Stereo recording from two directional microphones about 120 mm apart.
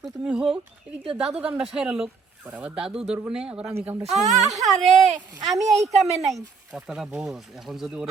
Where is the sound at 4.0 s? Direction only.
70° right (ahead or behind).